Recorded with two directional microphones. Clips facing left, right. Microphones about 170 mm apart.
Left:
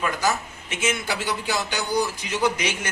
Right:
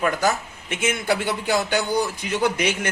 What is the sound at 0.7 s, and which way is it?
A man's voice, 55° right (ahead or behind).